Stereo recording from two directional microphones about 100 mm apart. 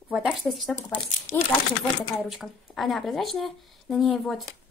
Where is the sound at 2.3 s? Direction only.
Centre (ahead or behind).